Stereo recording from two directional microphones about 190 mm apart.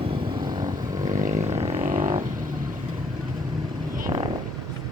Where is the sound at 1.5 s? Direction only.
35° right (ahead or behind).